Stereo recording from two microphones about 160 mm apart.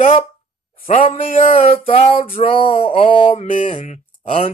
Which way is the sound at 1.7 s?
35° left (ahead or behind).